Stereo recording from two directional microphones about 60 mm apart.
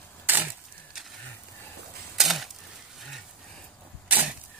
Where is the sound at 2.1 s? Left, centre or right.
Centre.